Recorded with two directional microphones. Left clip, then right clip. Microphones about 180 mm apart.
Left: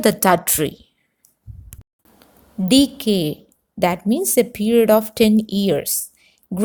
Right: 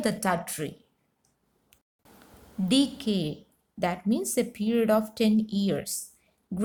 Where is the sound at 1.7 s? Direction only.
35° left (ahead or behind).